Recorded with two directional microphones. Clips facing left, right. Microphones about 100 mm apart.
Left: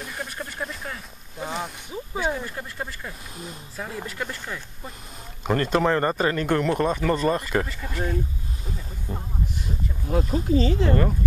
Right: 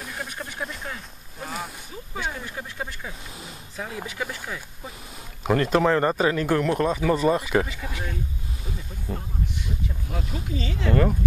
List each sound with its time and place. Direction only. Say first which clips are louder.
0.0 s speech: left 1 dB; centre (ahead or behind)
9.1 s speech: right 1 dB; 5° left (ahead or behind)
10.0 s speech: left 14 dB; 40° left (ahead or behind)